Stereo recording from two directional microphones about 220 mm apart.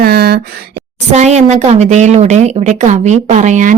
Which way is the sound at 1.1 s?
30° right (ahead or behind).